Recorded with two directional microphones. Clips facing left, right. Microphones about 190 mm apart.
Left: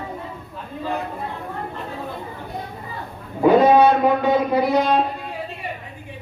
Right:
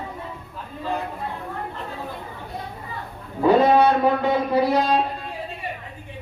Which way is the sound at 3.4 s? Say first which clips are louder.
Left 3 dB; 15° left (ahead or behind).